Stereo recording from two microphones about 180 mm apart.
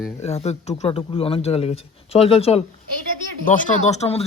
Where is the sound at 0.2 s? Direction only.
35° left (ahead or behind).